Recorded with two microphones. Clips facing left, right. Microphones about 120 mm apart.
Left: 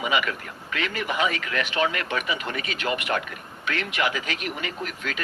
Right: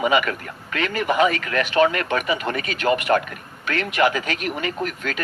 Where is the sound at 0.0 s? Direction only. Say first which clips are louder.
Right 6 dB; 45° right (ahead or behind).